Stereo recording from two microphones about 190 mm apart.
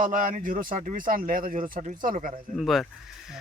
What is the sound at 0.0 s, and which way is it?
Speech, 45° right (ahead or behind).